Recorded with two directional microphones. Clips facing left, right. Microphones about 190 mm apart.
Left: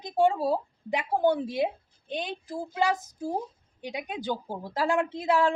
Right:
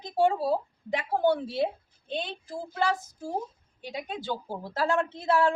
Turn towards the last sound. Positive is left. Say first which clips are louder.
# even
turn(degrees=15)  # may be behind; listen again after turning